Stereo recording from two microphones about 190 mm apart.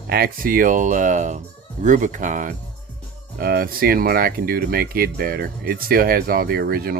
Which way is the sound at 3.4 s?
50° right (ahead or behind).